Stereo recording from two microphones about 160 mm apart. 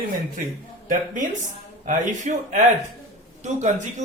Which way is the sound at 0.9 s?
55° right (ahead or behind).